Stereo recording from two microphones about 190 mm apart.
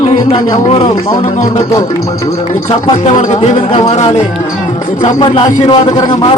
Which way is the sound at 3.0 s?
35° left (ahead or behind).